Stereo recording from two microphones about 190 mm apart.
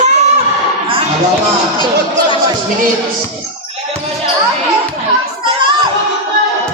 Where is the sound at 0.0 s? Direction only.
35° right (ahead or behind).